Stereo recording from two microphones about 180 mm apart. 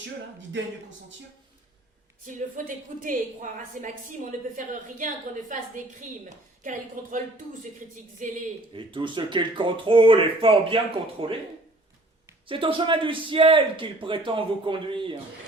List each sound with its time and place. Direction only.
0.3 s a man's voice: 90° right
2.2 s a woman's voice: 45° right (ahead or behind)
8.7 s a man's voice: 25° right (ahead or behind)
12.5 s a man's voice: 30° right (ahead or behind)